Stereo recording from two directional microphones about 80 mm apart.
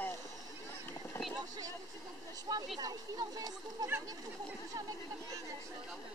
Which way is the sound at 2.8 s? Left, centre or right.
Right.